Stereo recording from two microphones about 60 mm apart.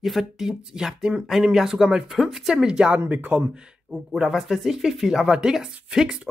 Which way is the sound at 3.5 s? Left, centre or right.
Centre.